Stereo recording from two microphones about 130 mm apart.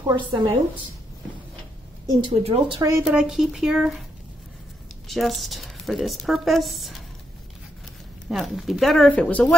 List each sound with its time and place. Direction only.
0.0 s a woman's voice: 35° right (ahead or behind)
2.2 s speech: 45° right (ahead or behind)
3.0 s a woman's voice: 5° right (ahead or behind)
5.0 s a woman's voice: centre (ahead or behind)
8.3 s a woman's voice: centre (ahead or behind)